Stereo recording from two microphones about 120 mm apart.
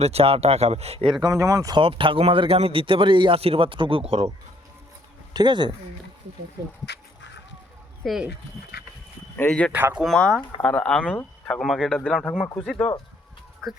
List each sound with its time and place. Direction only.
0.0 s speech: 60° right (ahead or behind)
1.2 s speech: 30° right (ahead or behind)
1.8 s a man's voice: 45° right (ahead or behind)
5.3 s speech: 35° right (ahead or behind)
8.0 s speech: 5° right (ahead or behind)
9.5 s speech: 5° left (ahead or behind)
9.7 s speech: 15° right (ahead or behind)
10.0 s speech: 5° left (ahead or behind)